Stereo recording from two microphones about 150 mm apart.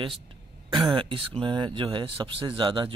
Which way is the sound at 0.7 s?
35° right (ahead or behind).